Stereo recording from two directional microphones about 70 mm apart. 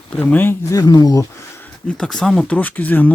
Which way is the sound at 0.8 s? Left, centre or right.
Left.